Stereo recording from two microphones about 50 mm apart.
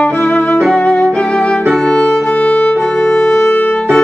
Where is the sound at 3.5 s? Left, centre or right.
Left.